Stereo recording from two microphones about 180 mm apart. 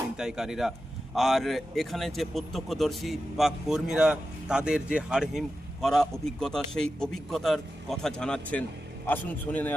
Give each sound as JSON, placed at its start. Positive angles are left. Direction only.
{"t": 0.2, "sound": "a man's voice", "side_deg": -5}